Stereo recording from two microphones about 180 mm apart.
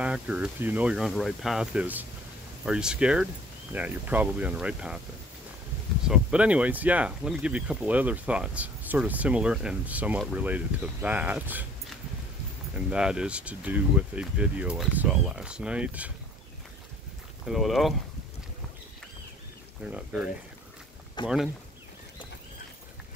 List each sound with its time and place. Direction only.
0.0 s speech: 5° right (ahead or behind)
6.0 s speech: 5° right (ahead or behind)
12.7 s speech: 5° right (ahead or behind)
17.5 s speech: centre (ahead or behind)
19.8 s speech: 5° right (ahead or behind)
21.2 s speech: 25° left (ahead or behind)